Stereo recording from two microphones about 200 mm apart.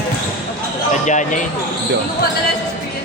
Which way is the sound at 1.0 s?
40° left (ahead or behind).